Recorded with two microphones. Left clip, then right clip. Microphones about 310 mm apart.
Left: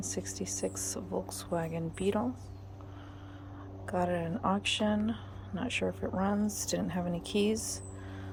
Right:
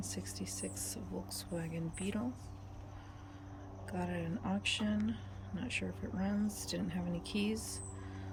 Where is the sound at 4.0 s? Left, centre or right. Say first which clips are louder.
Left 10 dB; centre.